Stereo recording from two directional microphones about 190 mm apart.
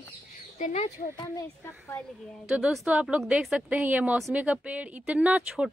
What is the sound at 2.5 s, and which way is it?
A woman's voice, 5° right (ahead or behind).